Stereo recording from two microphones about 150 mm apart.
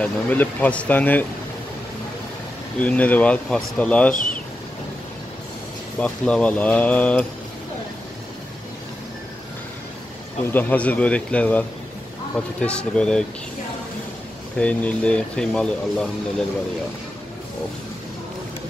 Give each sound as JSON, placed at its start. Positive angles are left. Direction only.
{"t": 0.0, "sound": "speech", "side_deg": 10}
{"t": 2.8, "sound": "speech", "side_deg": 10}
{"t": 4.1, "sound": "speech", "side_deg": 60}
{"t": 5.9, "sound": "speech", "side_deg": 10}
{"t": 10.5, "sound": "speech", "side_deg": 10}
{"t": 14.6, "sound": "speech", "side_deg": 10}